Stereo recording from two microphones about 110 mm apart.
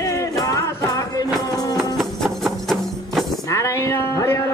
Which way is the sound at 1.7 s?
Centre (ahead or behind).